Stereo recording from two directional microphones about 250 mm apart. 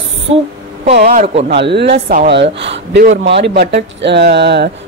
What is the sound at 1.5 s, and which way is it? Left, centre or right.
A woman's voice, right.